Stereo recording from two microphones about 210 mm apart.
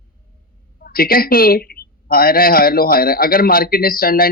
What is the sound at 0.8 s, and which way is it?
A woman's voice, 45° left (ahead or behind).